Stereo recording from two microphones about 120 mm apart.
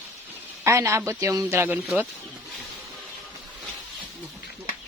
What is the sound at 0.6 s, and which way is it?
Speech, 25° right (ahead or behind).